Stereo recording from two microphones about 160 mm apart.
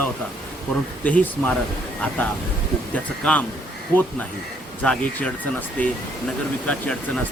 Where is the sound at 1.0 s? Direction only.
10° left (ahead or behind).